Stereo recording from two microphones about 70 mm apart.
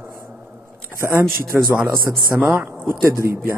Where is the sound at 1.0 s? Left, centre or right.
Right.